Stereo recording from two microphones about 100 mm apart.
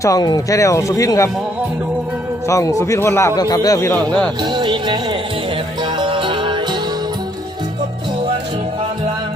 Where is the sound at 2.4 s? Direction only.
30° left (ahead or behind).